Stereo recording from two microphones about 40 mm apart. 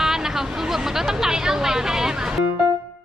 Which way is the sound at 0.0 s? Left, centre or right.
Centre.